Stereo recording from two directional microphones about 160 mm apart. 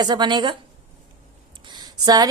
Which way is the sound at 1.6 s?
25° right (ahead or behind).